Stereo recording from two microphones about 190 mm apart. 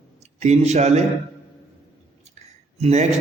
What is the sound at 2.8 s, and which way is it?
Speech, 35° right (ahead or behind).